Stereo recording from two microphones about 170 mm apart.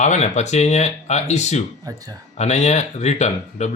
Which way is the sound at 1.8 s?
20° right (ahead or behind).